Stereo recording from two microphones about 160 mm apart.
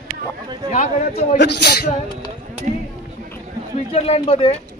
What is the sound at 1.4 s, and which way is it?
Speech, 90° left.